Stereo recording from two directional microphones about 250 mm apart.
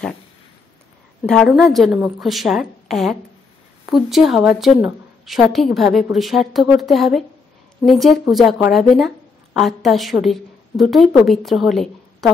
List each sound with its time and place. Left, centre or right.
1.2 s a woman's voice: centre